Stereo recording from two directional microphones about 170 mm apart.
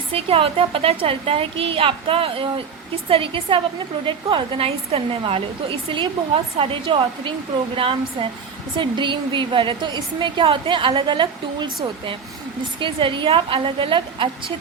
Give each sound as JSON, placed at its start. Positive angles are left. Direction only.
{"t": 0.1, "sound": "a woman's voice", "side_deg": -35}